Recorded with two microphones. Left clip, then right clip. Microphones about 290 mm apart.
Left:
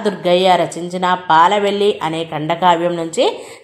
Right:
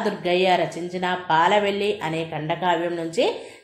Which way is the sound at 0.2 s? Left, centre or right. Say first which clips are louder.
Left 8 dB; centre.